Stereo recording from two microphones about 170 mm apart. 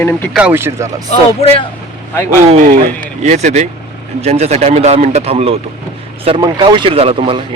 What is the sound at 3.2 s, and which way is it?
Speech, 45° right (ahead or behind).